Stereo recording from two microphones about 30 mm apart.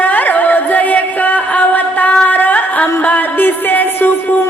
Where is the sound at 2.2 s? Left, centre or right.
Left.